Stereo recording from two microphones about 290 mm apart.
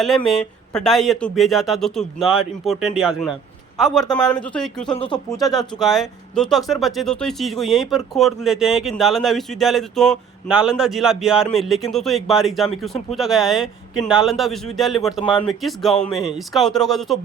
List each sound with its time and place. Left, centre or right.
0.3 s speech: centre
4.9 s speech: centre
5.8 s speech: centre
15.2 s speech: centre
15.4 s speech: centre